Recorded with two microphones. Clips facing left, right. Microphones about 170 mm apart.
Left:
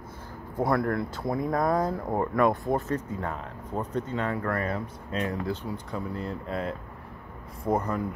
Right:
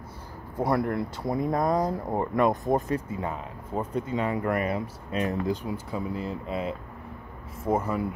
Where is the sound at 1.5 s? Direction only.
25° right (ahead or behind).